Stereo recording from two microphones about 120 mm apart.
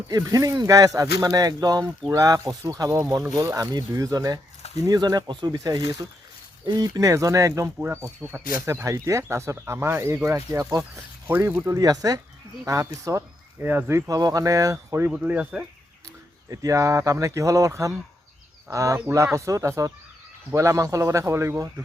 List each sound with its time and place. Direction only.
0.1 s speech: 30° right (ahead or behind)
15.1 s speech: 15° right (ahead or behind)
16.5 s speech: 25° right (ahead or behind)